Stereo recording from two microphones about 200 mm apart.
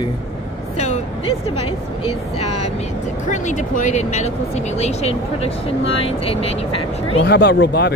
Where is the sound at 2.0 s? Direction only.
30° left (ahead or behind).